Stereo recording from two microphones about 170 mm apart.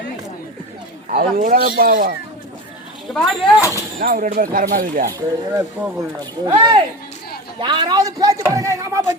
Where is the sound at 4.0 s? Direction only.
55° right (ahead or behind).